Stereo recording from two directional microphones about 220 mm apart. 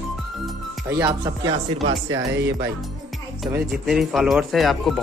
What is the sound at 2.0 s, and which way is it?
Speech, 55° right (ahead or behind).